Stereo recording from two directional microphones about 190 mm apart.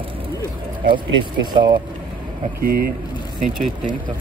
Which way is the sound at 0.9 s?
20° right (ahead or behind).